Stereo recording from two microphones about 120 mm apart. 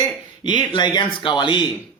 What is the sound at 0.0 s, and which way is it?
A man's voice, 40° left (ahead or behind).